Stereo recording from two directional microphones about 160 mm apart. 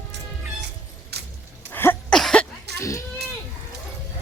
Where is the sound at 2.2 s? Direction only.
Centre (ahead or behind).